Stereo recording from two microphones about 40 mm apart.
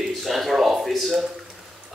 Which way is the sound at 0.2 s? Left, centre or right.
Centre.